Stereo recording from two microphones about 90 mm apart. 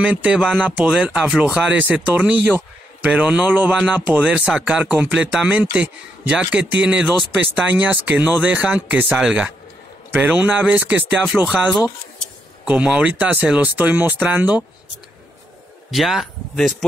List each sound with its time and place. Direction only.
0.0 s speech: 10° right (ahead or behind)
10.1 s speech: 20° right (ahead or behind)
12.6 s speech: 15° right (ahead or behind)
15.9 s speech: centre (ahead or behind)